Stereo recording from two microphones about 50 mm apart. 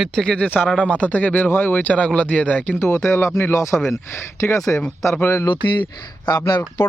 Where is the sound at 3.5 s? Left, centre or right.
Left.